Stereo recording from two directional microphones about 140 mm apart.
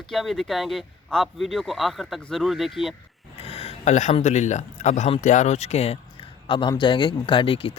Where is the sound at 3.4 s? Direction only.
45° left (ahead or behind).